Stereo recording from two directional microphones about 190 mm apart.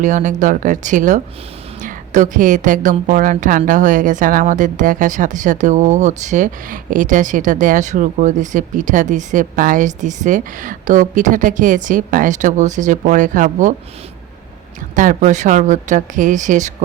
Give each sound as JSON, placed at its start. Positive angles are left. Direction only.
{"t": 0.0, "sound": "speech", "side_deg": -40}
{"t": 14.9, "sound": "speech", "side_deg": -40}